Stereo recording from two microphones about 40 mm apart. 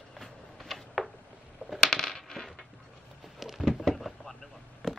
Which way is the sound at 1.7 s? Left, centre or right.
Centre.